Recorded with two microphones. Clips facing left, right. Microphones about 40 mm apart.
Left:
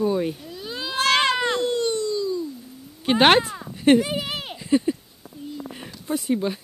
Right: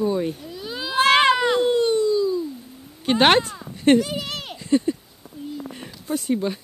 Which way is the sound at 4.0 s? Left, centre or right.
Centre.